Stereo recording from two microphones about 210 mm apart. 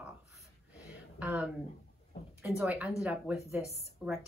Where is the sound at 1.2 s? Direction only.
5° right (ahead or behind).